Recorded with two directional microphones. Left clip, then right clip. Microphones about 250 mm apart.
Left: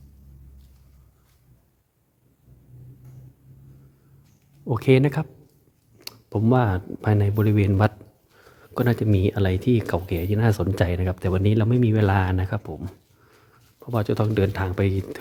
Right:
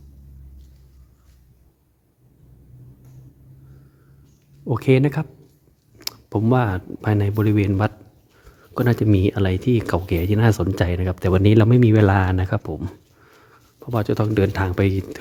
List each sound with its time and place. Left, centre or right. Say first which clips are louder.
4.6 s speech: right 1 dB; centre